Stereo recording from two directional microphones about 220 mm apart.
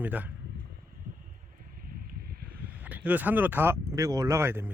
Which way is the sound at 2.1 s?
45° right (ahead or behind).